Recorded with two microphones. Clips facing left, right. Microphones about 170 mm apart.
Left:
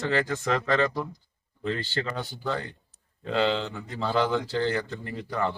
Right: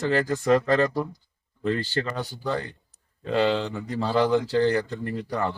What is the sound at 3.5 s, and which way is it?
Speech, 40° right (ahead or behind).